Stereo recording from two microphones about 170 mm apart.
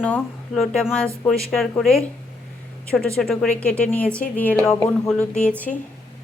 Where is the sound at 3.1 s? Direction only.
Centre (ahead or behind).